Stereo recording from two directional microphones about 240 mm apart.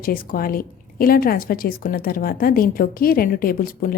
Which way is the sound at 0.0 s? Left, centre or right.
Left.